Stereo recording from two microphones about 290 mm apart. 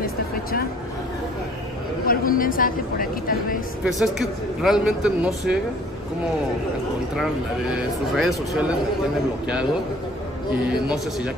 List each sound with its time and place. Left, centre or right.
0.0 s music: left
2.0 s speech: left
3.8 s a man's voice: centre
7.7 s a man's voice: centre
10.7 s a man's voice: centre